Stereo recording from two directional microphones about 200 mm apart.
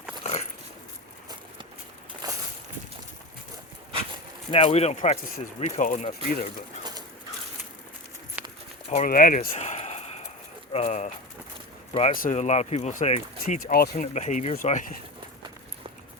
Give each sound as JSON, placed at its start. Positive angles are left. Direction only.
{"t": 0.2, "sound": "dog", "side_deg": 35}
{"t": 2.2, "sound": "a sound", "side_deg": -20}
{"t": 4.5, "sound": "speech", "side_deg": 30}
{"t": 8.4, "sound": "walk", "side_deg": -10}
{"t": 8.9, "sound": "speech", "side_deg": 40}
{"t": 9.6, "sound": "a sound", "side_deg": 35}
{"t": 10.7, "sound": "speech", "side_deg": 30}
{"t": 12.1, "sound": "speech", "side_deg": 40}